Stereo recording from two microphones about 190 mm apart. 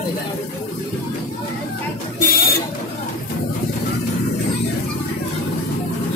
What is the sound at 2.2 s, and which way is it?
Buzzer, 45° left (ahead or behind).